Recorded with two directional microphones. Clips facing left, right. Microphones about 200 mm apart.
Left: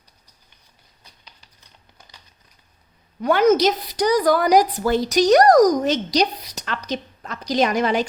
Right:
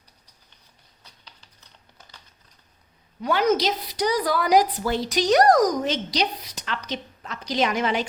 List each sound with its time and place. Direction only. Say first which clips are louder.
2.0 s crumpling: even; 15° left (ahead or behind)
3.2 s a woman's voice: left 5 dB; 50° left (ahead or behind)